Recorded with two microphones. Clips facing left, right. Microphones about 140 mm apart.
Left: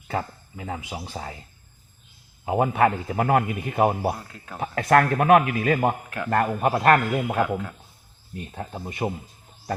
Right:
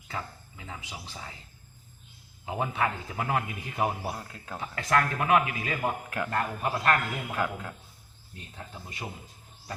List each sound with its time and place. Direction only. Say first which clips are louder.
0.1 s a man's voice: left 9 dB; 50° left (ahead or behind)
2.5 s a man's voice: left 9 dB; 50° left (ahead or behind)
4.2 s speech: left 1 dB; 5° right (ahead or behind)
4.6 s a man's voice: left 8 dB; 55° left (ahead or behind)
7.4 s speech: left 6 dB; 5° left (ahead or behind)
8.5 s a man's voice: left 9 dB; 55° left (ahead or behind)